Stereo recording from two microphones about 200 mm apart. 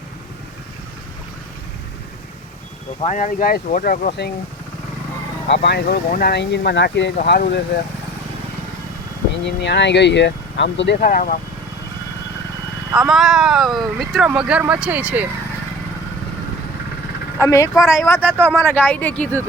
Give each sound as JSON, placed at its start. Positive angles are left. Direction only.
{"t": 3.0, "sound": "speech", "side_deg": 35}
{"t": 5.5, "sound": "speech", "side_deg": 55}
{"t": 7.2, "sound": "speech", "side_deg": 50}
{"t": 9.4, "sound": "speech", "side_deg": 60}
{"t": 10.9, "sound": "speech", "side_deg": 45}
{"t": 13.0, "sound": "speech", "side_deg": 0}
{"t": 17.4, "sound": "speech", "side_deg": 15}